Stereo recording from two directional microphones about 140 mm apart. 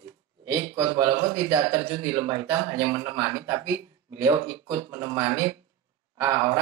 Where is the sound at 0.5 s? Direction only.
20° right (ahead or behind).